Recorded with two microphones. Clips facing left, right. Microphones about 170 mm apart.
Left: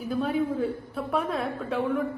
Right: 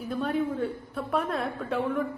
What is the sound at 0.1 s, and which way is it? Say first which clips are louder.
A woman's voice: left 2 dB; centre (ahead or behind).